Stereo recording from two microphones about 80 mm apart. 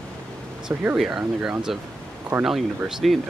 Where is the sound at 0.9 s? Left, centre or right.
Centre.